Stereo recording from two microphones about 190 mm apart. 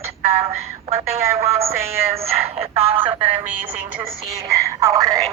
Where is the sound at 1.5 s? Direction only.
15° right (ahead or behind).